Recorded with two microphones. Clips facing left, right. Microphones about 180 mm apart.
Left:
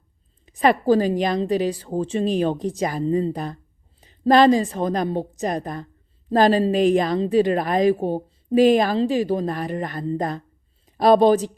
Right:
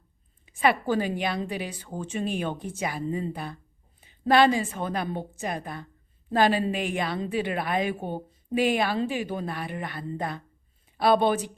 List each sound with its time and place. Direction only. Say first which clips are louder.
0.4 s a woman's voice: left 6 dB; 40° left (ahead or behind)